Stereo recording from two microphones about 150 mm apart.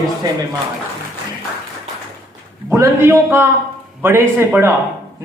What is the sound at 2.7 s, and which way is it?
A man's voice, 20° right (ahead or behind).